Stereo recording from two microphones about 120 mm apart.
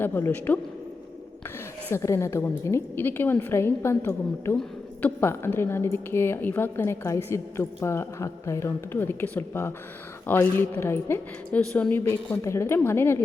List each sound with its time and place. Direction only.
0.0 s a woman's voice: 15° left (ahead or behind)
1.9 s speech: 25° left (ahead or behind)
11.6 s speech: 10° left (ahead or behind)